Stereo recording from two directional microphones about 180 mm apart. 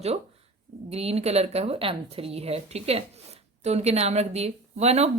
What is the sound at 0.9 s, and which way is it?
Speech, 35° right (ahead or behind).